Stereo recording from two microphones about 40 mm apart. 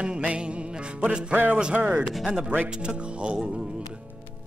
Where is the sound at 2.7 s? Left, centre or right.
Right.